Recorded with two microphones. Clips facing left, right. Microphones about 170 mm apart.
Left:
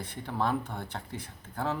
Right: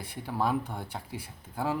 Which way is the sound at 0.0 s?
10° right (ahead or behind).